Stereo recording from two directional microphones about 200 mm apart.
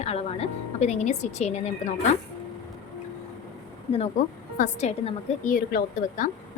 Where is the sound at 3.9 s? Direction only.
30° left (ahead or behind).